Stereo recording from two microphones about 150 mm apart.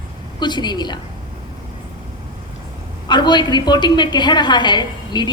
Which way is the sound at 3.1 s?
30° left (ahead or behind).